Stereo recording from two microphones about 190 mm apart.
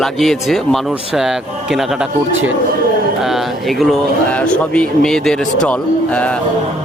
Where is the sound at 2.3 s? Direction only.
90° right.